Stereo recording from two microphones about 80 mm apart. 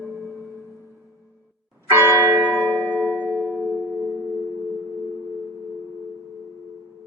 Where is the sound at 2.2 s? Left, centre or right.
Right.